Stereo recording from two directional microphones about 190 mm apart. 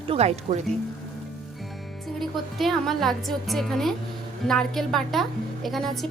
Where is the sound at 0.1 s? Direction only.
35° right (ahead or behind).